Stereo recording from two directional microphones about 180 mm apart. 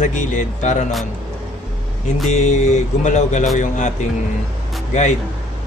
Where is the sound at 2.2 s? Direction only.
40° left (ahead or behind).